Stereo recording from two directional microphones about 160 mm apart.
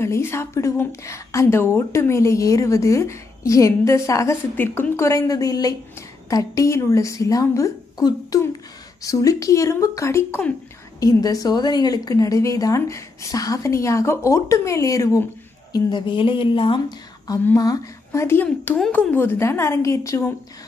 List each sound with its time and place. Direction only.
0.0 s a woman's voice: 15° left (ahead or behind); by 16.8 s 35° left (ahead or behind)
17.3 s a woman's voice: 20° left (ahead or behind)